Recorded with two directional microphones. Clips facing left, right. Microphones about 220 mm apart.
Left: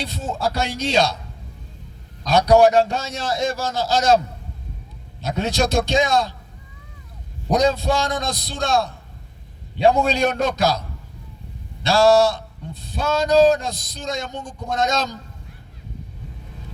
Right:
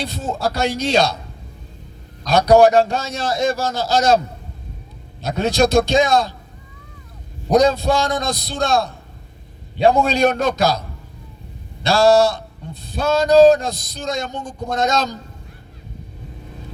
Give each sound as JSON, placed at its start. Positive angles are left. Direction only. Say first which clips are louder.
{"t": 0.0, "sound": "a man's voice", "louder": "right 2 dB", "side_deg": -35}
{"t": 2.2, "sound": "a man's voice", "louder": "right 2 dB", "side_deg": -35}
{"t": 5.2, "sound": "a man's voice", "louder": "right 4 dB", "side_deg": -35}
{"t": 7.5, "sound": "a man's voice", "louder": "right 4 dB", "side_deg": -35}